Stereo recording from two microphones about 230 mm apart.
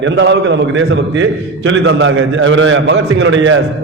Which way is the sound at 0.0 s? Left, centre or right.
Right.